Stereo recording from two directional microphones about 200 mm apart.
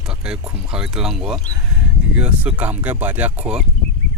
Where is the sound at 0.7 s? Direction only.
5° right (ahead or behind).